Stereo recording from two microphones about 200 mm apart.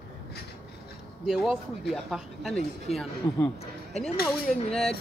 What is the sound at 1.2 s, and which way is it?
Speech, centre (ahead or behind).